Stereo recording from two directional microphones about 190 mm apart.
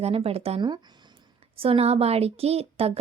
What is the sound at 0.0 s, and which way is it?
A woman's voice, 30° right (ahead or behind).